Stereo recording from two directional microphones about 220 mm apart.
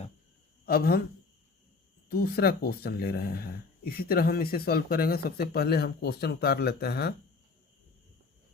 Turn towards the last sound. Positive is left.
turn(degrees=45)  # may be behind; listen again after turning